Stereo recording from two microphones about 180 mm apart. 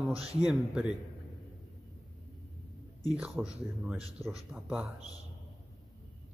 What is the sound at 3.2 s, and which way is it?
A man's voice, 5° right (ahead or behind).